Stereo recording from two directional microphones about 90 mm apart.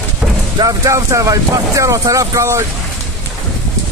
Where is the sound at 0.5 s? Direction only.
40° right (ahead or behind).